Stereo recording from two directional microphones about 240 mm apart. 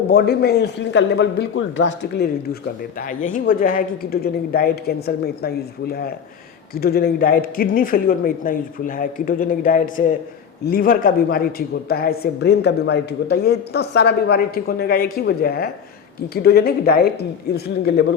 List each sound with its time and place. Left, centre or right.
0.1 s a man's voice: left